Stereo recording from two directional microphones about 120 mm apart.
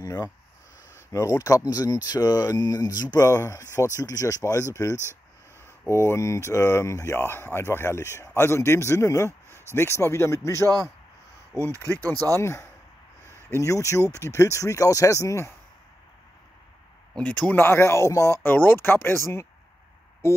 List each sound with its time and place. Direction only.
0.0 s speech: 35° left (ahead or behind)
5.9 s speech: 20° left (ahead or behind)
11.5 s speech: 25° right (ahead or behind)
12.4 s speech: 25° left (ahead or behind)
17.1 s speech: 10° left (ahead or behind); by 18.4 s 25° left (ahead or behind)
18.4 s speech: 15° left (ahead or behind)